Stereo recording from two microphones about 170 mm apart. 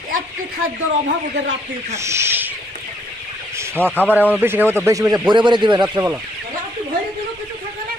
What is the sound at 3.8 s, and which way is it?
Speech, 10° left (ahead or behind).